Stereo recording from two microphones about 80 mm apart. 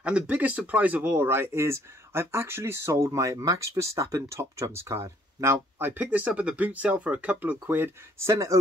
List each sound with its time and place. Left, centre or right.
0.0 s speech: centre
1.1 s speech: right